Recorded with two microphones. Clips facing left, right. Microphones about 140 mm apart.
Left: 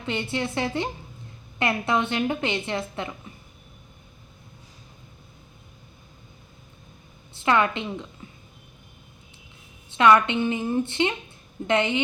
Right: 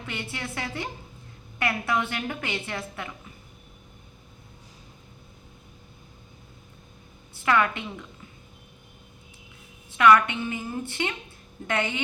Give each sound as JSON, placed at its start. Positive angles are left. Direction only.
{"t": 0.0, "sound": "a woman's voice", "side_deg": 25}
{"t": 7.3, "sound": "a woman's voice", "side_deg": 25}
{"t": 9.9, "sound": "a woman's voice", "side_deg": 25}